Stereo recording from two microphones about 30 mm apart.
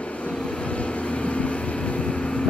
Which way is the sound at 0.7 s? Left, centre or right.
Left.